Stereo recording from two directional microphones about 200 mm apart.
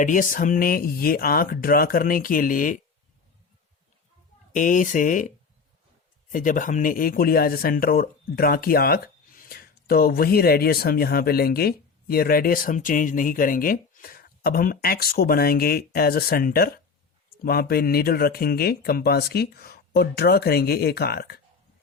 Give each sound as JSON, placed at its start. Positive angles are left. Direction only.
{"t": 0.0, "sound": "speech", "side_deg": 40}
{"t": 4.5, "sound": "speech", "side_deg": 40}
{"t": 6.3, "sound": "speech", "side_deg": 40}